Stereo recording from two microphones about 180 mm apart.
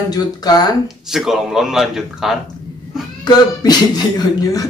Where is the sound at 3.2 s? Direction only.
20° left (ahead or behind).